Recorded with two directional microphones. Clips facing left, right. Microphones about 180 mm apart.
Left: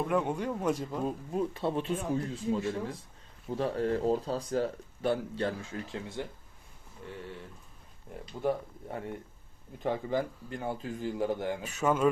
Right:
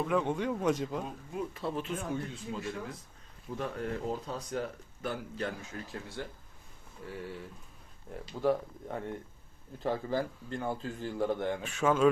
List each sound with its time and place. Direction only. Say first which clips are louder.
0.0 s a man's voice: even; 5° left (ahead or behind)
1.3 s speech: left 3 dB; 30° left (ahead or behind)
8.3 s speech: right 2 dB; centre (ahead or behind)
9.7 s a man's voice: left 1 dB; 20° left (ahead or behind)